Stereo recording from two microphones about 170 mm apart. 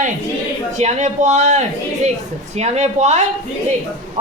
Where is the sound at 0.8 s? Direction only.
45° right (ahead or behind).